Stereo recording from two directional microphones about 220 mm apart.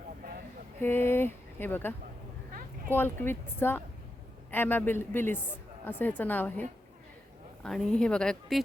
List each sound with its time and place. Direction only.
0.8 s speech: 10° left (ahead or behind)
2.5 s a sound: 40° right (ahead or behind)
2.9 s speech: 10° left (ahead or behind)